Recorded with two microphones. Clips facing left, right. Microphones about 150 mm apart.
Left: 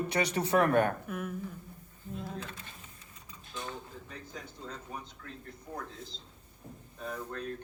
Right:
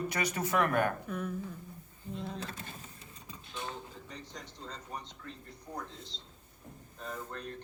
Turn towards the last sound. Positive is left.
turn(degrees=5)  # may be behind; listen again after turning